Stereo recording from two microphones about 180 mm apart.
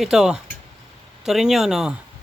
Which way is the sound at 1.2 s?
Centre (ahead or behind).